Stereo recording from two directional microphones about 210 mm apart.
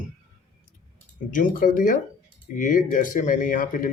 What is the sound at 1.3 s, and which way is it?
A man's voice, 40° left (ahead or behind).